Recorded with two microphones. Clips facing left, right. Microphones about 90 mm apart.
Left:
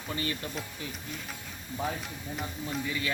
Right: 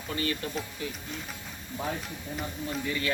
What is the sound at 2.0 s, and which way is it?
Speech, centre (ahead or behind).